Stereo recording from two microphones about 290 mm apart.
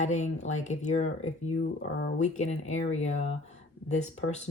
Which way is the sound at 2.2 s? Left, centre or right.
Left.